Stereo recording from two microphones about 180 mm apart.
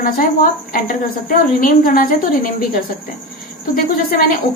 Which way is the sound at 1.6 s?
50° left (ahead or behind).